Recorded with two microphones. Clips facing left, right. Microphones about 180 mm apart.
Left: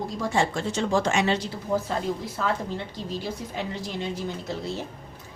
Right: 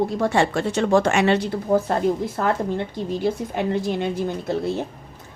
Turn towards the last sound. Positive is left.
turn(degrees=-55)  # may be behind; listen again after turning